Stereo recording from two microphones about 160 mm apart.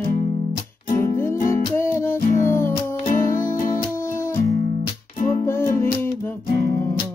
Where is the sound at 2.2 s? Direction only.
55° left (ahead or behind).